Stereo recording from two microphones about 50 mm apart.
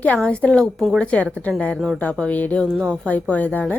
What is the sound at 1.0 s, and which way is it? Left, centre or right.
Speech, left.